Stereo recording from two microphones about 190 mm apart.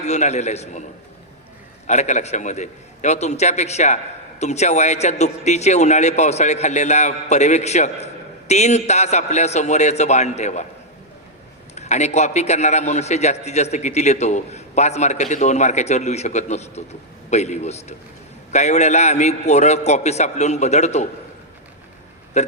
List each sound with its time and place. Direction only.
0.0 s a man's voice: 35° left (ahead or behind)
1.9 s a man's voice: 40° left (ahead or behind)
11.7 s a man's voice: 35° left (ahead or behind)
22.3 s burping: 35° left (ahead or behind)